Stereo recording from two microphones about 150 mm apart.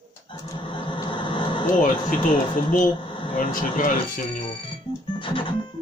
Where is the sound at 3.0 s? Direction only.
35° left (ahead or behind).